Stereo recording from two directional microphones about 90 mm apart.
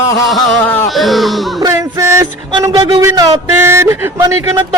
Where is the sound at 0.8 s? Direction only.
Centre (ahead or behind).